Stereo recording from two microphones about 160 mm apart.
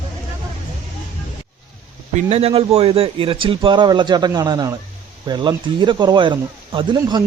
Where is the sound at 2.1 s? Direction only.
40° right (ahead or behind).